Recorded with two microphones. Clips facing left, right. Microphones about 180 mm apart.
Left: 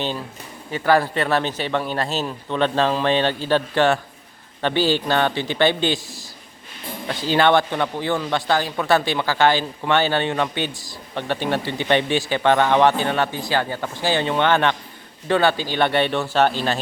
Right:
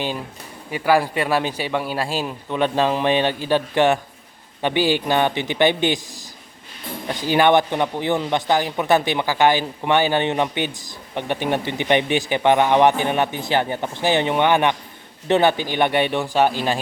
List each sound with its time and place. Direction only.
0.7 s speech: 10° right (ahead or behind)